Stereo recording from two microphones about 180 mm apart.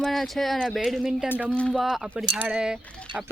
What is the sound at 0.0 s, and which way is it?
Speech, centre (ahead or behind).